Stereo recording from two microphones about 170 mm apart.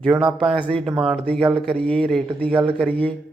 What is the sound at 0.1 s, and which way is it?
Speech, 25° right (ahead or behind).